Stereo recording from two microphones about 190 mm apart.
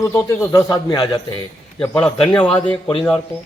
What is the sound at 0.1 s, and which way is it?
A man's voice, 15° left (ahead or behind).